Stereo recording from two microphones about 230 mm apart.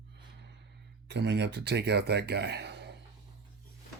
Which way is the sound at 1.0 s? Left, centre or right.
Right.